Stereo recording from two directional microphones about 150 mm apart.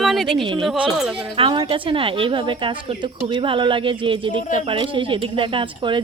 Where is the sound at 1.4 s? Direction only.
35° right (ahead or behind).